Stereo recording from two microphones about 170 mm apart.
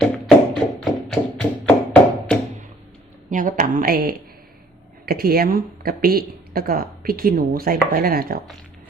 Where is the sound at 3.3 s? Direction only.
50° right (ahead or behind).